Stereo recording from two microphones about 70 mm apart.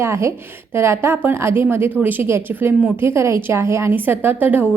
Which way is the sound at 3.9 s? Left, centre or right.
Right.